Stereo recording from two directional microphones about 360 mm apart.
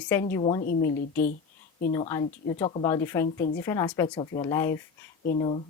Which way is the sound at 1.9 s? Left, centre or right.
Centre.